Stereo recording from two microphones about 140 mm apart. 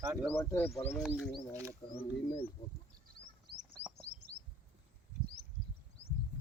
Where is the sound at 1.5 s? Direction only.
20° right (ahead or behind).